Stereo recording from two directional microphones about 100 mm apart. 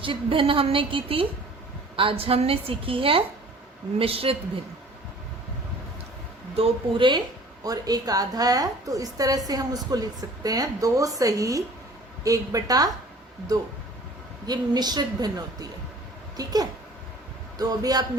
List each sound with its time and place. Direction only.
0.0 s a woman's voice: 60° right (ahead or behind)
6.6 s a woman's voice: 55° right (ahead or behind)
7.6 s a woman's voice: 40° right (ahead or behind)
14.4 s a woman's voice: 45° right (ahead or behind)